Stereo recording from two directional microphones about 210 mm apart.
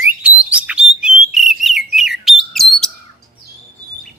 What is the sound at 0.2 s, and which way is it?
Bird, 5° right (ahead or behind).